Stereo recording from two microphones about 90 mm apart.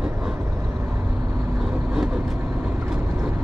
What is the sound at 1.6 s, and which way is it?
Vehicle, 5° right (ahead or behind).